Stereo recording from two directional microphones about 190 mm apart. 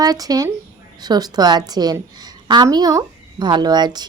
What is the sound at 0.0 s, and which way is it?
Speech, 20° right (ahead or behind).